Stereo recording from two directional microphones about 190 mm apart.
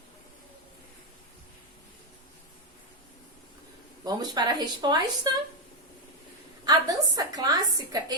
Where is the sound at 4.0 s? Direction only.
20° right (ahead or behind).